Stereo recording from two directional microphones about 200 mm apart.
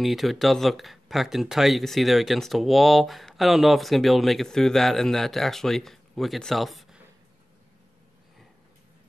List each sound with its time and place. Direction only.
0.0 s speech: centre (ahead or behind)